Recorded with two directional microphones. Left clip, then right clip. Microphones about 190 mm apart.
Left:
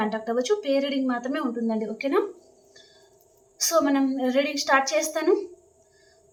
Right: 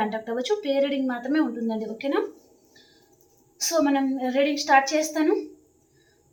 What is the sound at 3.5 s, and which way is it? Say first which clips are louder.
A woman's voice: left 1 dB; 20° left (ahead or behind).